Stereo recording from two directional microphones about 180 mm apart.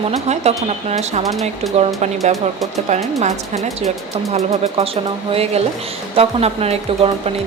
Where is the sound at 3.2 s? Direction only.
40° right (ahead or behind).